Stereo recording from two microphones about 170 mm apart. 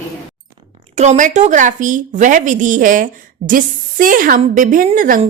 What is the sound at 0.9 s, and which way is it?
Speech, 45° right (ahead or behind).